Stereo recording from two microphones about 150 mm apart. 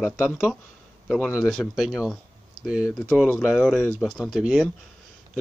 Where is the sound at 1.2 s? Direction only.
5° right (ahead or behind).